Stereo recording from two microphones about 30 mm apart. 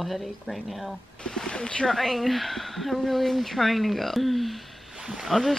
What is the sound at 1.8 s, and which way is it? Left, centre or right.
Speech, centre.